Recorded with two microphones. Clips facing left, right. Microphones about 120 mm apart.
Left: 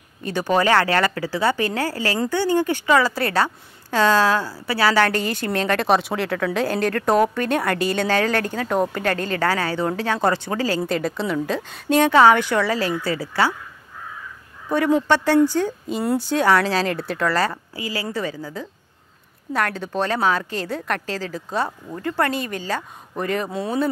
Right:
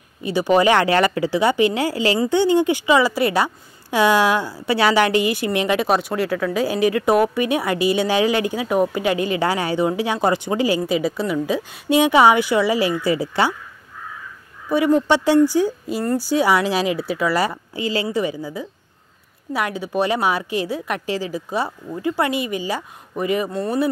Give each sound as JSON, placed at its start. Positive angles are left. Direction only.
{"t": 0.2, "sound": "a woman's voice", "side_deg": -10}
{"t": 5.9, "sound": "a woman's voice", "side_deg": 0}
{"t": 15.0, "sound": "a woman's voice", "side_deg": -15}
{"t": 17.7, "sound": "a woman's voice", "side_deg": -25}
{"t": 23.5, "sound": "speech", "side_deg": 0}